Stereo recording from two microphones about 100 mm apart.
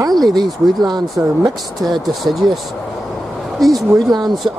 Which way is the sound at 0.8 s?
40° right (ahead or behind).